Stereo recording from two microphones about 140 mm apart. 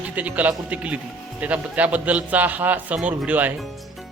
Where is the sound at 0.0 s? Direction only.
10° right (ahead or behind).